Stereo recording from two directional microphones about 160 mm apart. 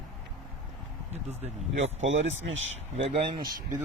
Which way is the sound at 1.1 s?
40° right (ahead or behind).